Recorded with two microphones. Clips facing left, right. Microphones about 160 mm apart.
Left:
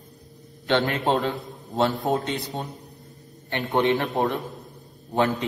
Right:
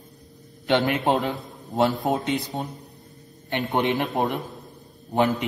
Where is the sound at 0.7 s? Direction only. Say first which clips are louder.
Right 1 dB; 15° right (ahead or behind).